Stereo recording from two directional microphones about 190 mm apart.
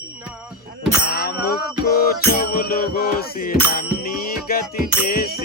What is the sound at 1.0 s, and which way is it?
Bicycle bell, 55° left (ahead or behind).